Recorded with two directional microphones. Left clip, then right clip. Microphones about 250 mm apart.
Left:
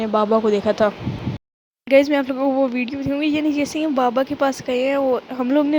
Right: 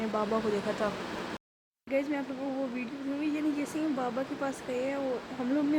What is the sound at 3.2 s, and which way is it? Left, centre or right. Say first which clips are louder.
Speech: left 11 dB; left.